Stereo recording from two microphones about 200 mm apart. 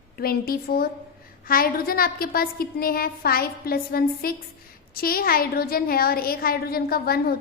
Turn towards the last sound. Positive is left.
turn(degrees=50)  # may be behind; listen again after turning